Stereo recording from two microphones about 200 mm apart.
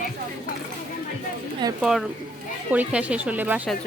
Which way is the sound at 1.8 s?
Centre (ahead or behind).